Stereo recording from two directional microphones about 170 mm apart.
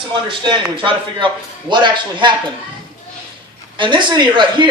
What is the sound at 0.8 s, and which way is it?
Speech, 30° right (ahead or behind).